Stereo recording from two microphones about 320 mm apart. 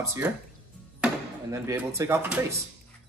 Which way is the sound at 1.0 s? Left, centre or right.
Centre.